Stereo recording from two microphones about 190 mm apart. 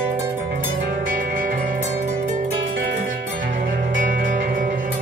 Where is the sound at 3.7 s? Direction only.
45° right (ahead or behind).